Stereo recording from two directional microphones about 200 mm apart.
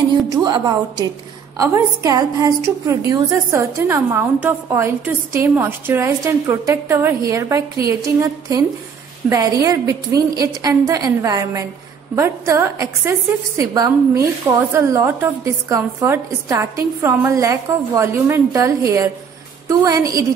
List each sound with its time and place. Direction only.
0.3 s a woman's voice: 20° right (ahead or behind)